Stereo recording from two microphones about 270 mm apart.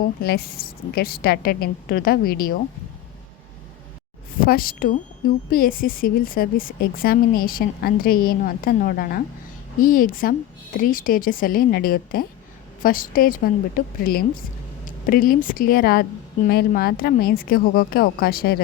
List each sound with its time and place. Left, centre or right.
0.2 s a woman's voice: left
4.4 s a woman's voice: left